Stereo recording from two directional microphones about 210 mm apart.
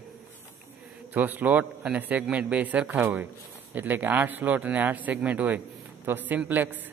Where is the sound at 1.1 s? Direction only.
10° right (ahead or behind).